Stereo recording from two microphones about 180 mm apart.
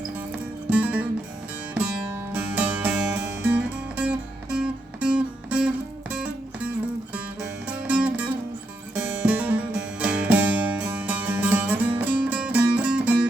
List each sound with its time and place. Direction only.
0.7 s music: 10° right (ahead or behind)
7.9 s music: 5° right (ahead or behind)